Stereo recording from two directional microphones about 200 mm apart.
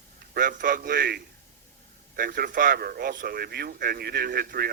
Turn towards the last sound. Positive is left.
turn(degrees=-50)  # may be behind; listen again after turning